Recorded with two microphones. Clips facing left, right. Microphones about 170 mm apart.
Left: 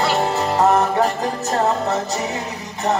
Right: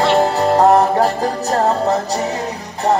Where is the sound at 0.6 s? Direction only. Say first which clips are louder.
Right 3 dB; 35° right (ahead or behind).